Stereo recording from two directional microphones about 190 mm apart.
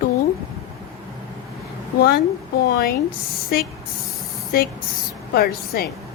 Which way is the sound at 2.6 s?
50° left (ahead or behind).